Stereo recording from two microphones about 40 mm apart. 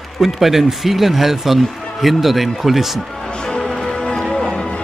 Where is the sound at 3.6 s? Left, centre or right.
Centre.